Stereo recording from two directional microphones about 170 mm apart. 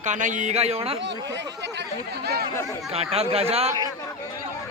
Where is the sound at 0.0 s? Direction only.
45° right (ahead or behind).